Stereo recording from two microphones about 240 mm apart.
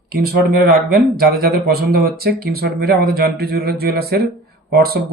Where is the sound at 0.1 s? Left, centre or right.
Right.